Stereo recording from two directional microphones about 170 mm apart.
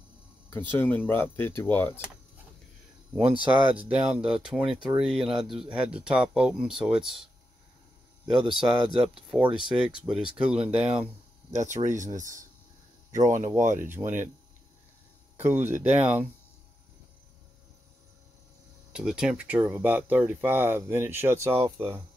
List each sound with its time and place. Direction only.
0.5 s speech: 10° left (ahead or behind)
3.6 s speech: 10° right (ahead or behind)
8.3 s speech: 5° right (ahead or behind)
11.5 s speech: 45° right (ahead or behind)
13.8 s speech: 10° right (ahead or behind)
15.3 s speech: 10° right (ahead or behind)
18.9 s speech: 5° right (ahead or behind)